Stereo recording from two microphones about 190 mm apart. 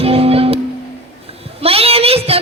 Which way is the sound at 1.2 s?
30° right (ahead or behind).